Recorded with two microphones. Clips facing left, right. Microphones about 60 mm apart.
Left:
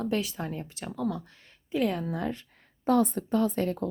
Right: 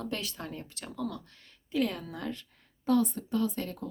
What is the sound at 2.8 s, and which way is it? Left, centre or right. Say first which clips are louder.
Speech: left 3 dB; left.